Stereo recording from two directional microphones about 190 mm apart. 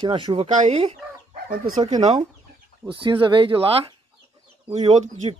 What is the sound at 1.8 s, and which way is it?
Speech, 20° right (ahead or behind).